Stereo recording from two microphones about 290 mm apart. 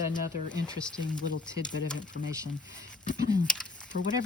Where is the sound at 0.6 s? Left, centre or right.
Centre.